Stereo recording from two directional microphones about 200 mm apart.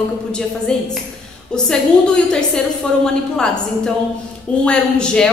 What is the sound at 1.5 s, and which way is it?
A woman's voice, 5° left (ahead or behind).